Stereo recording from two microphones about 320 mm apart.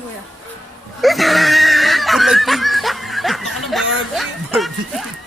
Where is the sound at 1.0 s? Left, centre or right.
Centre.